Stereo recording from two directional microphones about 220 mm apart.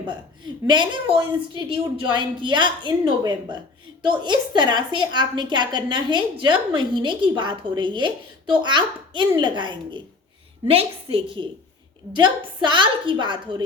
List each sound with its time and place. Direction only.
0.1 s a woman's voice: 20° right (ahead or behind)